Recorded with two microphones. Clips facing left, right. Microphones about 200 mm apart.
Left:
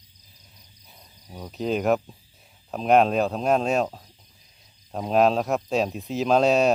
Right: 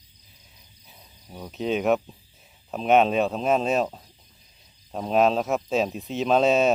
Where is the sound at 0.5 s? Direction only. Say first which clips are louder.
Even; centre (ahead or behind).